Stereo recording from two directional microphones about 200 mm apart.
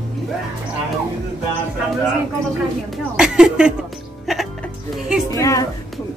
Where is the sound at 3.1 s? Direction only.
5° right (ahead or behind).